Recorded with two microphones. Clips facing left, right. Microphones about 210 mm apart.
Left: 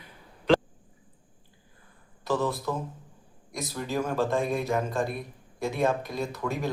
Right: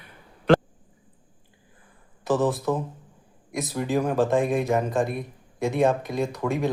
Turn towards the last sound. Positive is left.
turn(degrees=0)  # may be behind; listen again after turning